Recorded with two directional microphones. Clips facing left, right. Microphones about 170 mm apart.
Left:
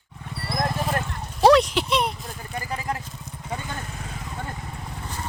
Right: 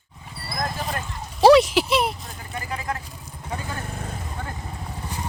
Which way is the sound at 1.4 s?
5° right (ahead or behind).